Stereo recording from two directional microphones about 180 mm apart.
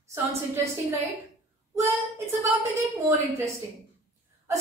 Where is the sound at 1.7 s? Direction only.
15° right (ahead or behind).